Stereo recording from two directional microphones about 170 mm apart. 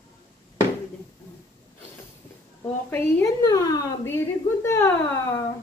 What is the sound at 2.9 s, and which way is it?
A woman's voice, 20° left (ahead or behind).